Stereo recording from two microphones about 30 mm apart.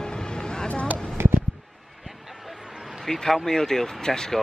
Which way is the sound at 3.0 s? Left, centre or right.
Centre.